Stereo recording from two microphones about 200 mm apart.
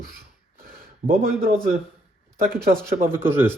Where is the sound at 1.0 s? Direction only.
45° right (ahead or behind).